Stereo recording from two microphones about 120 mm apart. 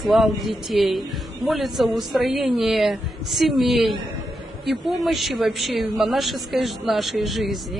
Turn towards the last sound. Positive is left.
turn(degrees=0)  # may be behind; listen again after turning